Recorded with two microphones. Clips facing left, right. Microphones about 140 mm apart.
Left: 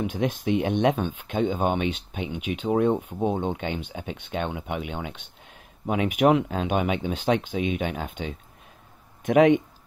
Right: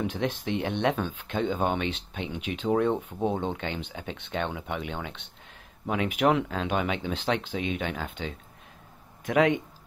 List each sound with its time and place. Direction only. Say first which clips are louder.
0.0 s speech: left 3 dB; 15° left (ahead or behind)